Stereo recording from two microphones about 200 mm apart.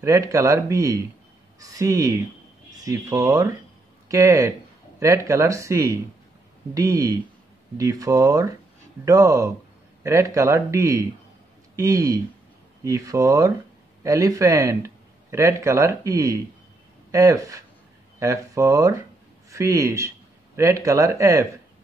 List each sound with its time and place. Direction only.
0.0 s speech: 15° right (ahead or behind)